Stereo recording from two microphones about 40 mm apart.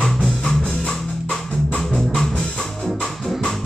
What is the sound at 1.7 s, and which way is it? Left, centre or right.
Music, left.